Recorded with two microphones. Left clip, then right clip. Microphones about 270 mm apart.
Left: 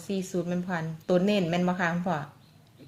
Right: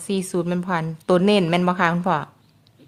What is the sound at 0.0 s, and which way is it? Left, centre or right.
A woman's voice, right.